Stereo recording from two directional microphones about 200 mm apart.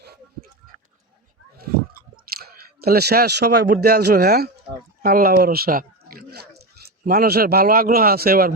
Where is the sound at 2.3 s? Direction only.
50° right (ahead or behind).